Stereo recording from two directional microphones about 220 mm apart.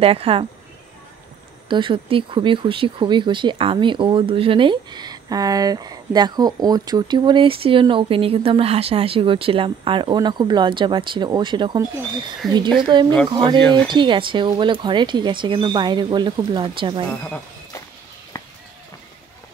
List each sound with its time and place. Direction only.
0.0 s speech: 25° right (ahead or behind)
1.7 s speech: 20° right (ahead or behind)
12.4 s speech: centre (ahead or behind)
12.9 s speech: 20° right (ahead or behind)
17.2 s a sound: 5° left (ahead or behind)